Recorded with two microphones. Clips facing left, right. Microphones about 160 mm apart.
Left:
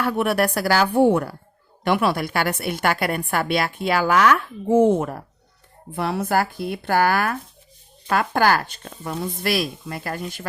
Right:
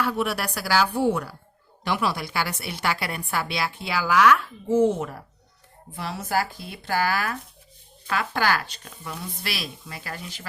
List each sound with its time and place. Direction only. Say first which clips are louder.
0.0 s a woman's voice: left 5 dB; 55° left (ahead or behind)